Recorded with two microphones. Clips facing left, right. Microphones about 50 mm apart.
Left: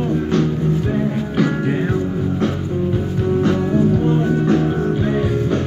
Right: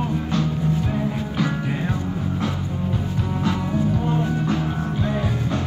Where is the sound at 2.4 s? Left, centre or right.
Left.